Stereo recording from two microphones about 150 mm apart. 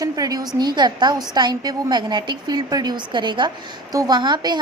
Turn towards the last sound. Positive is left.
turn(degrees=-30)  # may be behind; listen again after turning